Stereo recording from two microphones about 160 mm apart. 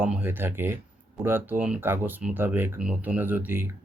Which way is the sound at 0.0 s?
10° right (ahead or behind).